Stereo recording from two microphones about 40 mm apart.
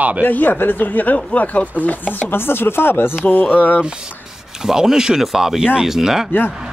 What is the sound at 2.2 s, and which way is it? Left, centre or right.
Speech, left.